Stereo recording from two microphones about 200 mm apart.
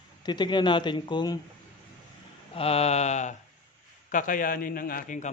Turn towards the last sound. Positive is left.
turn(degrees=40)  # may be behind; listen again after turning